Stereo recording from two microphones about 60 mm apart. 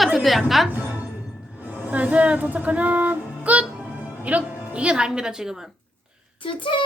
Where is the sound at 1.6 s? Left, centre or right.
Right; by 5.6 s centre.